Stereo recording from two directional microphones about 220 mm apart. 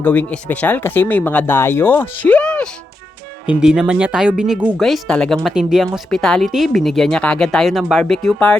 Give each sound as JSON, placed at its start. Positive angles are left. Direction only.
{"t": 0.0, "sound": "speech", "side_deg": 5}